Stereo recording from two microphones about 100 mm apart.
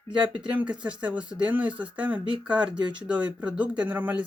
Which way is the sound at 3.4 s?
15° right (ahead or behind).